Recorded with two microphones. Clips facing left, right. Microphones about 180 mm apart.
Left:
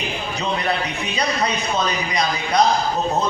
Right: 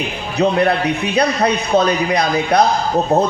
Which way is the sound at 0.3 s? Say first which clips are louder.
Right 10 dB; 60° right (ahead or behind).